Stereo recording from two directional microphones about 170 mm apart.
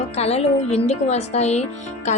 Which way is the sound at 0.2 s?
40° left (ahead or behind).